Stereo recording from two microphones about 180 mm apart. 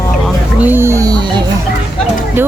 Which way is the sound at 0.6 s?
10° right (ahead or behind).